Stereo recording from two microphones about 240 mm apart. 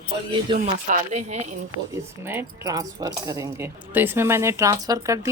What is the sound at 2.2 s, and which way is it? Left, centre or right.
Speech, centre.